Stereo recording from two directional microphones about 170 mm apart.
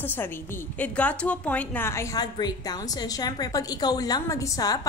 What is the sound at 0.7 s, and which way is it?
A woman's voice, 10° left (ahead or behind).